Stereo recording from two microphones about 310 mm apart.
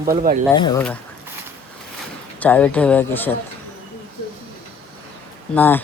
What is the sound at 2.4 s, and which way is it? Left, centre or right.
Speech, centre.